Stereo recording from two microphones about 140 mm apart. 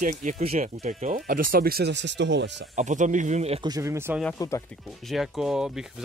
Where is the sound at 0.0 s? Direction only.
65° right (ahead or behind); by 1.9 s 90° right.